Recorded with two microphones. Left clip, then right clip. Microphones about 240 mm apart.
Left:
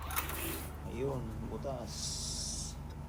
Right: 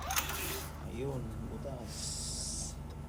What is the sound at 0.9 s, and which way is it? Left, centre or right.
Speech, centre.